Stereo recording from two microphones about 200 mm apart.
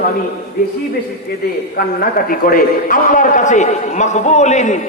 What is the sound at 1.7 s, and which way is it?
A man's voice, 45° left (ahead or behind).